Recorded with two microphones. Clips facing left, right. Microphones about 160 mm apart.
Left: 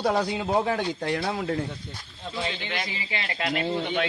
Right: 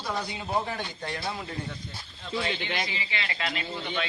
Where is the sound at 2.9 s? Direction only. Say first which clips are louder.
Left 2 dB; 45° left (ahead or behind).